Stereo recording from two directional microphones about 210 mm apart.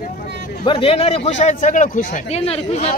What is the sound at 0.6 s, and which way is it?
A man's voice, 25° left (ahead or behind).